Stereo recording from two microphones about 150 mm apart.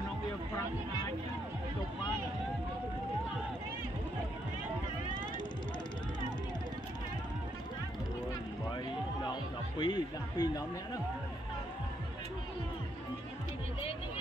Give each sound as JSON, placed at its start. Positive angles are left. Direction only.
{"t": 9.2, "sound": "music", "side_deg": 30}